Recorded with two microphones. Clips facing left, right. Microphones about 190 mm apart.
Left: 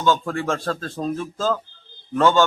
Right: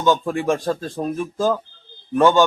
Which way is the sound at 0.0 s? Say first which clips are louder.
Right 3 dB; 15° right (ahead or behind).